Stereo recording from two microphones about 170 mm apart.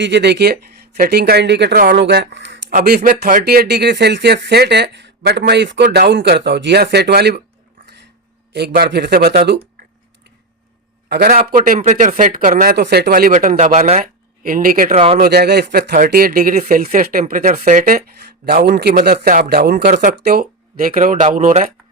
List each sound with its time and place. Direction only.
0.0 s speech: 90° right
0.5 s speech: 60° right (ahead or behind); by 2.7 s 90° right
2.7 s speech: 55° right (ahead or behind)
3.4 s speech: 70° right (ahead or behind)
8.5 s speech: 70° right (ahead or behind)
11.1 s speech: 60° right (ahead or behind)
12.7 s speech: 75° right (ahead or behind); by 14.9 s 55° right (ahead or behind)
14.9 s speech: 35° right (ahead or behind)
15.2 s speech: 65° right (ahead or behind); by 21.7 s 50° right (ahead or behind)